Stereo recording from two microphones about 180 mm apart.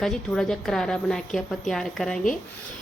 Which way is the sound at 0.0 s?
5° left (ahead or behind).